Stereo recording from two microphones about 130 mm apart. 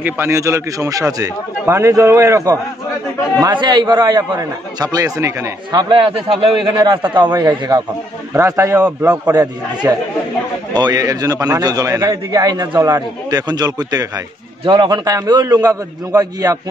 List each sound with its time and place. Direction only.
0.0 s a man's voice: 20° right (ahead or behind)